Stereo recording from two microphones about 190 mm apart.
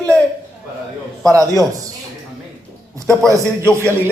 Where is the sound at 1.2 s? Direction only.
15° right (ahead or behind).